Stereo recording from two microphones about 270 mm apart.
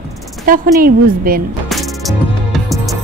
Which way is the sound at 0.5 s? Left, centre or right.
Right.